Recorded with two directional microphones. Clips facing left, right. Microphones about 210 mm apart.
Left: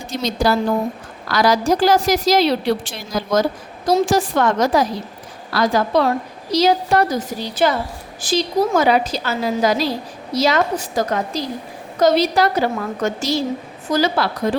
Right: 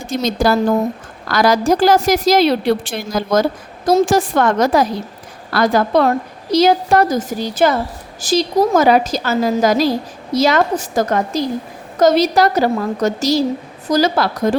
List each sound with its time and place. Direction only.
0.1 s a woman's voice: 50° right (ahead or behind)